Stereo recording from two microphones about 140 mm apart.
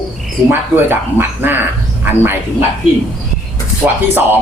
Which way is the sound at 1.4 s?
15° right (ahead or behind).